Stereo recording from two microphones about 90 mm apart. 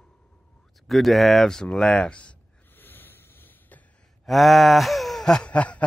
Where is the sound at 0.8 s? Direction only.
Centre (ahead or behind).